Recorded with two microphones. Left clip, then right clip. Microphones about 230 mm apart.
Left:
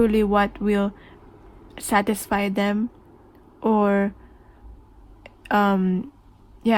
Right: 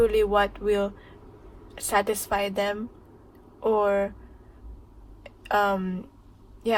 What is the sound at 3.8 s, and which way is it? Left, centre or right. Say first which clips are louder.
Speech: left 2 dB; left.